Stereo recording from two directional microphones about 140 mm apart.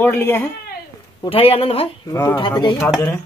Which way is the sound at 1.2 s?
40° left (ahead or behind).